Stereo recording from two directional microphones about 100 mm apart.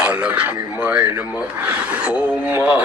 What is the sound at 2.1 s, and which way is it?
Speech, 15° right (ahead or behind).